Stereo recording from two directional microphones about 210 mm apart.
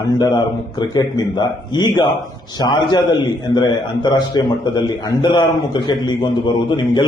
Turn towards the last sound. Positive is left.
turn(degrees=20)  # may be behind; listen again after turning